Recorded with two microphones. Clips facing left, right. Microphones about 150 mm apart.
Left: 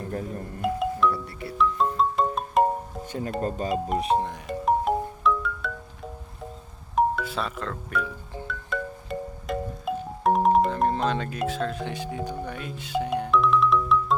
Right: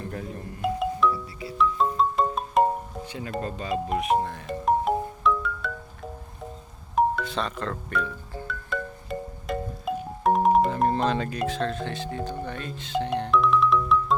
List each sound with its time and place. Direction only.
0.6 s music: centre (ahead or behind)
3.1 s speech: 40° left (ahead or behind)
3.9 s music: 30° left (ahead or behind)
4.4 s music: centre (ahead or behind)
6.9 s speech: 5° left (ahead or behind)
8.4 s music: centre (ahead or behind)